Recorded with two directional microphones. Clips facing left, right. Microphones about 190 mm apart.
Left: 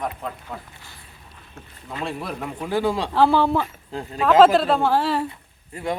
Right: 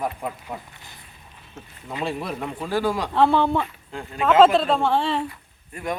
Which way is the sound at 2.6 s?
20° left (ahead or behind).